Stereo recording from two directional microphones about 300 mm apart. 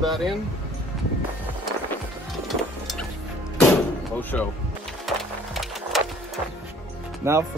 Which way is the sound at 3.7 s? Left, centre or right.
Centre.